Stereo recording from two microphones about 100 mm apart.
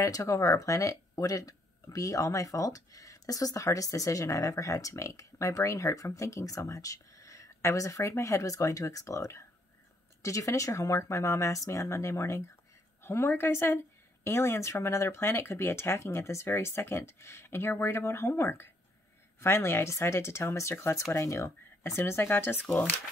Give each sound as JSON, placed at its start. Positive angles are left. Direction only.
{"t": 0.0, "sound": "speech", "side_deg": 35}